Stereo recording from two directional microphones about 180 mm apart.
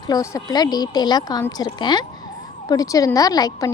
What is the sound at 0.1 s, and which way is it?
A woman's voice, 20° left (ahead or behind).